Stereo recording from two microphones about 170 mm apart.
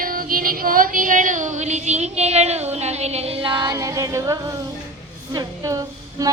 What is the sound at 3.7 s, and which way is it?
Music, 20° right (ahead or behind).